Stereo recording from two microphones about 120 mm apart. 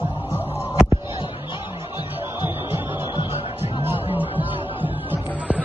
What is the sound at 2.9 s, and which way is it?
Music, 40° left (ahead or behind).